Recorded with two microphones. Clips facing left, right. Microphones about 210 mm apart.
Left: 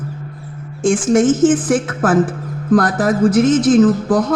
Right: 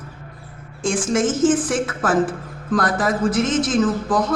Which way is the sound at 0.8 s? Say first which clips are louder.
Left 7 dB; 50° left (ahead or behind).